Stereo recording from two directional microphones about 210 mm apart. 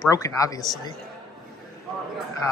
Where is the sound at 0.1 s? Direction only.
15° left (ahead or behind).